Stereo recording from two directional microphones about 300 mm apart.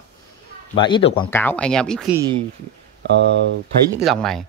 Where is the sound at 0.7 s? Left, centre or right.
Centre.